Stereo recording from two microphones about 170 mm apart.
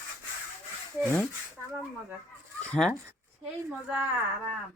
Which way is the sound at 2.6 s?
5° left (ahead or behind).